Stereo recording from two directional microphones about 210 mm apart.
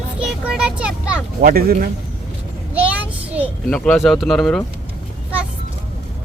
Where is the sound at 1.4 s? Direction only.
45° right (ahead or behind).